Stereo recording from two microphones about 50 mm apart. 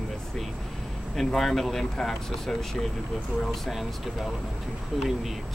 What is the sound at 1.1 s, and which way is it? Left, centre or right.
Speech, centre.